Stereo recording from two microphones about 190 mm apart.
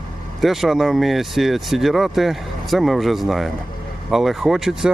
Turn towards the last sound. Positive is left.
turn(degrees=0)  # may be behind; listen again after turning